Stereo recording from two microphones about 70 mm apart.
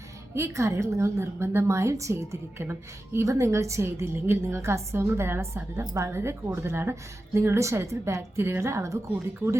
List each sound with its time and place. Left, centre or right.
0.3 s a woman's voice: right